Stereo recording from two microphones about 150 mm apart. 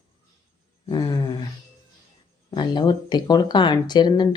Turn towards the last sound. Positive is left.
turn(degrees=30)  # may be behind; listen again after turning